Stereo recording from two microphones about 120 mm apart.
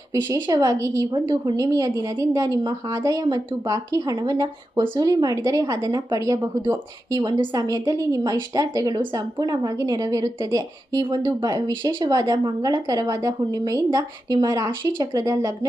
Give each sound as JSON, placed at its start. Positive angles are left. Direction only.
{"t": 0.4, "sound": "a woman's voice", "side_deg": -35}
{"t": 7.2, "sound": "a woman's voice", "side_deg": -35}